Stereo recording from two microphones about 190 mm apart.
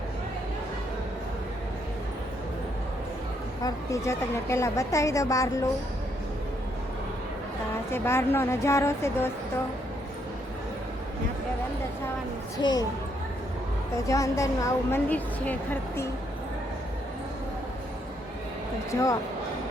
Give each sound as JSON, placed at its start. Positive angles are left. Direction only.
{"t": 3.6, "sound": "a woman's voice", "side_deg": 15}
{"t": 7.9, "sound": "a woman's voice", "side_deg": 15}
{"t": 12.6, "sound": "speech", "side_deg": 20}
{"t": 14.1, "sound": "a woman's voice", "side_deg": 15}
{"t": 18.9, "sound": "a woman's voice", "side_deg": 15}